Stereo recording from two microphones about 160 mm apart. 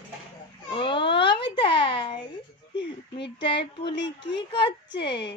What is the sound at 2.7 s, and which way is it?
Speech, 90° left.